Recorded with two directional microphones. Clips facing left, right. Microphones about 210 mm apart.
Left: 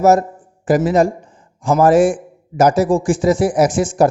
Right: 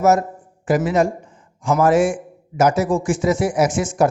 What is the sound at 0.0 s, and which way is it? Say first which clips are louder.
Speech: left 3 dB; 35° left (ahead or behind).